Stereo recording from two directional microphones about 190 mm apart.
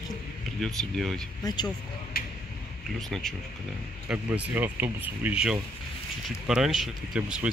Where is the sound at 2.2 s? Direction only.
50° left (ahead or behind).